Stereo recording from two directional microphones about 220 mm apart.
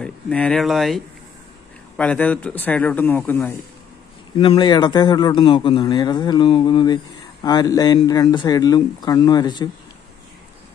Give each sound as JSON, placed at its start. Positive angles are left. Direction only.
{"t": 0.0, "sound": "speech", "side_deg": 5}
{"t": 4.4, "sound": "a man's voice", "side_deg": 20}